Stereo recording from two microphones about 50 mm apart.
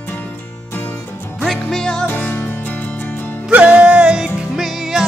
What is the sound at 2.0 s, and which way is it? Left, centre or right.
Music, left.